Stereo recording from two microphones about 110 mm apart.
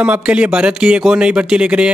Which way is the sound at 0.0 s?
10° right (ahead or behind).